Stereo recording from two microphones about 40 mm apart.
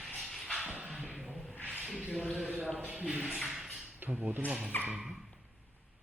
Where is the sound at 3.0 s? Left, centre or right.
Right.